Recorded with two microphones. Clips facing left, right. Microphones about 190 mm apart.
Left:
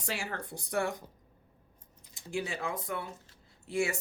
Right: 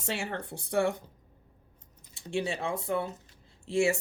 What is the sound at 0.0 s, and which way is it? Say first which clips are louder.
Speech: right 3 dB; 25° right (ahead or behind).